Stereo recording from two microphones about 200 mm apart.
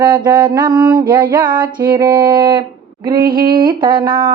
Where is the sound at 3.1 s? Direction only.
45° right (ahead or behind).